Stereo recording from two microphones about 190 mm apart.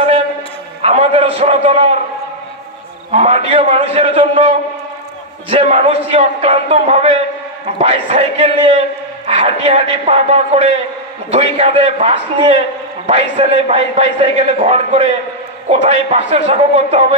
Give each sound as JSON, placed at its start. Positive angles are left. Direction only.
{"t": 0.8, "sound": "a man's voice", "side_deg": -30}
{"t": 3.1, "sound": "a man's voice", "side_deg": -35}